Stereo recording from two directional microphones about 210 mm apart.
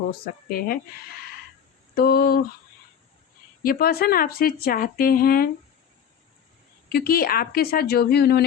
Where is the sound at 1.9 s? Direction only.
45° left (ahead or behind).